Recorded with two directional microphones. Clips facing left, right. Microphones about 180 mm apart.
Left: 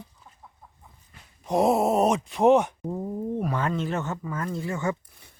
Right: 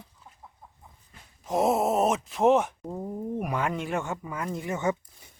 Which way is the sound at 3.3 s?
10° right (ahead or behind).